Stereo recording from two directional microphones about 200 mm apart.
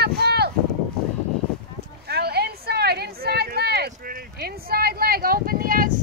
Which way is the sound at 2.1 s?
55° right (ahead or behind).